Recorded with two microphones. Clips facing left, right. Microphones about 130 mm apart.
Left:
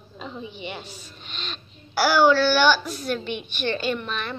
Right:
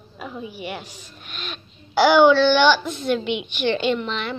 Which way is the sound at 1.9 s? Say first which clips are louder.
Right 4 dB; 20° right (ahead or behind).